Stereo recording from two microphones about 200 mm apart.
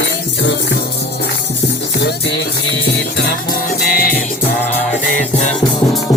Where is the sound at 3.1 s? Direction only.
50° left (ahead or behind).